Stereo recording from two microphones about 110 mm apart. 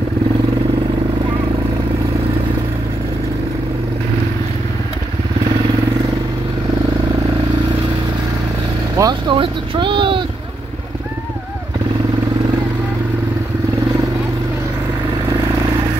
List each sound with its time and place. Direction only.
9.0 s vehicle: 30° right (ahead or behind)
9.3 s vehicle: 50° right (ahead or behind)